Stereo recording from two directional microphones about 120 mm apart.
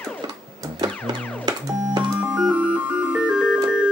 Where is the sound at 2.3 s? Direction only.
10° right (ahead or behind).